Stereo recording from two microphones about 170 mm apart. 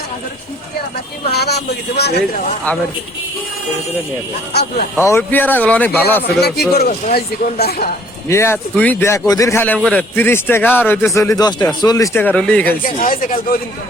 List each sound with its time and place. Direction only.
1.3 s speech: 70° left (ahead or behind)
5.0 s a man's voice: 15° left (ahead or behind)
6.4 s speech: 65° left (ahead or behind)
8.3 s a man's voice: 15° left (ahead or behind)
12.8 s speech: 55° left (ahead or behind)